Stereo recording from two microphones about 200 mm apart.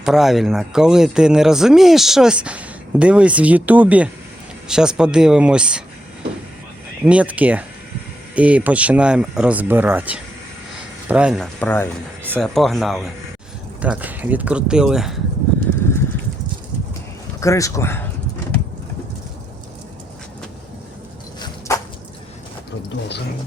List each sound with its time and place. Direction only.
0.0 s speech: centre (ahead or behind)
7.0 s speech: 5° right (ahead or behind)
11.6 s speech: 10° left (ahead or behind)
17.4 s speech: 15° left (ahead or behind)